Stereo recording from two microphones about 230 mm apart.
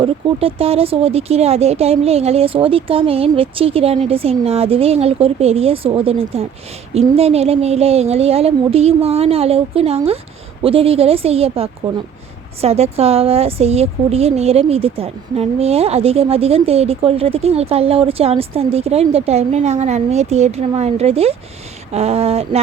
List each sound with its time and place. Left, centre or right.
0.0 s a woman's voice: right